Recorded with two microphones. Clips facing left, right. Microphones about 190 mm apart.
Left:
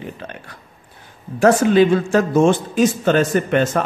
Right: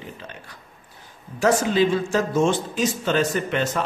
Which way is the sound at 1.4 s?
55° left (ahead or behind).